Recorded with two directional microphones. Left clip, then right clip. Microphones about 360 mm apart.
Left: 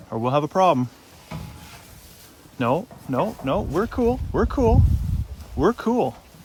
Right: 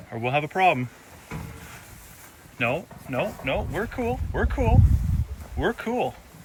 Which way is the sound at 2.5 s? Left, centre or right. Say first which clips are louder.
Left 3 dB; centre.